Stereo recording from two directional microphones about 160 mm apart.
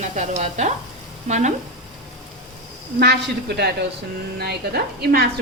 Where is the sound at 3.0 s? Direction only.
90° right.